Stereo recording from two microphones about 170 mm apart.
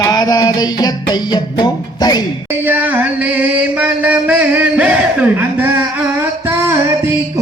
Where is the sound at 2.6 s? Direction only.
10° right (ahead or behind).